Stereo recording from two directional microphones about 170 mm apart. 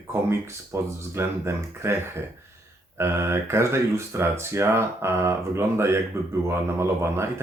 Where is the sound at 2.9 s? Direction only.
15° right (ahead or behind).